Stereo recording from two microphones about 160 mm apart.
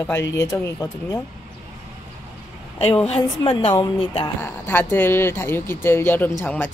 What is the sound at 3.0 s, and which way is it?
Speech, 40° left (ahead or behind).